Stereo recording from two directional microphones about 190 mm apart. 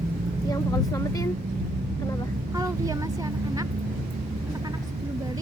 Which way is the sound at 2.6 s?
20° right (ahead or behind).